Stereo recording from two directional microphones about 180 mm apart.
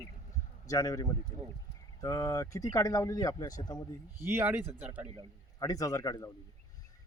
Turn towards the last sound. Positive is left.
turn(degrees=20)  # may be behind; listen again after turning